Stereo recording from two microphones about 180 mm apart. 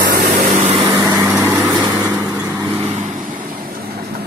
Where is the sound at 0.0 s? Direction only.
55° right (ahead or behind).